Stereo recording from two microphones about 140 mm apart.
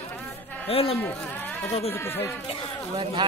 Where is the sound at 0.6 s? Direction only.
45° left (ahead or behind).